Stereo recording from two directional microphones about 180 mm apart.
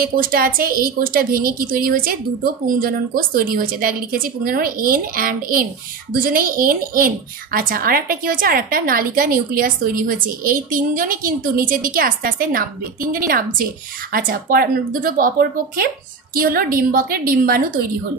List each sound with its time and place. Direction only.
0.0 s a woman's voice: 55° right (ahead or behind)